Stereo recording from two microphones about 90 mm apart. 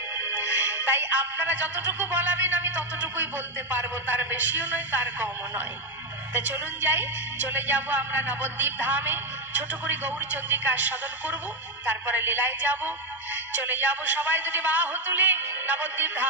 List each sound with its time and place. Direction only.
0.2 s music: 20° right (ahead or behind)
3.7 s a woman's voice: 20° right (ahead or behind)
6.3 s a woman's voice: 20° right (ahead or behind)